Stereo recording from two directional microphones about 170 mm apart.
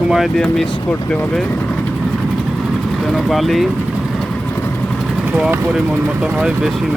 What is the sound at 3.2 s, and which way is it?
Speech, centre (ahead or behind).